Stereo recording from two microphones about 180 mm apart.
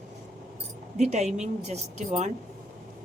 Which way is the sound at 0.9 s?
40° right (ahead or behind).